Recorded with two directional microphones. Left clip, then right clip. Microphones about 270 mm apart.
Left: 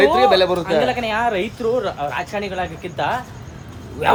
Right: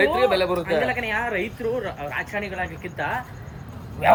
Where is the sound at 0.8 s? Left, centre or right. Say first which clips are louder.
Left 5 dB; centre.